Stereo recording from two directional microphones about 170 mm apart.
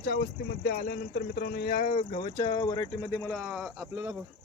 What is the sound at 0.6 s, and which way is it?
Speech, 65° left (ahead or behind).